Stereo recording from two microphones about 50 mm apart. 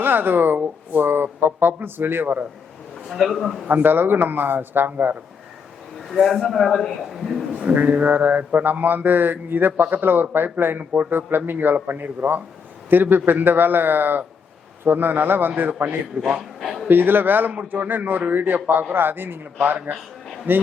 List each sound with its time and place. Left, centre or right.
0.0 s speech: right
3.1 s a man's voice: centre
3.7 s speech: right
6.1 s a man's voice: centre
7.6 s a sound: right
16.6 s a man's voice: centre
16.9 s a sound: right
18.9 s speech: right
19.9 s a sound: right